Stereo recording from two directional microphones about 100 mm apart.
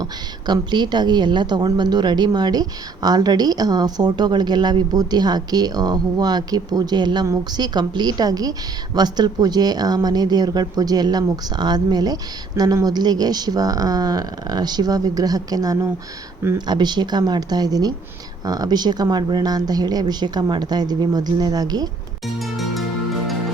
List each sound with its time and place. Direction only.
0.0 s a woman's voice: 45° right (ahead or behind)
22.4 s music: centre (ahead or behind)